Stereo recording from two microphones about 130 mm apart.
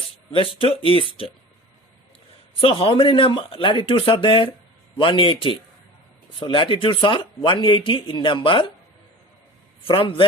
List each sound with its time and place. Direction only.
0.3 s speech: 45° left (ahead or behind)
2.6 s speech: 45° left (ahead or behind)
9.8 s speech: 45° left (ahead or behind)